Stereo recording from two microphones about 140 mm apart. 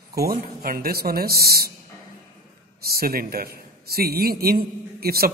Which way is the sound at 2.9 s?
90° right.